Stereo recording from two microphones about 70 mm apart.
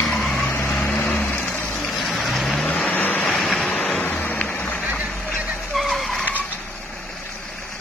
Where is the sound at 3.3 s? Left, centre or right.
Centre.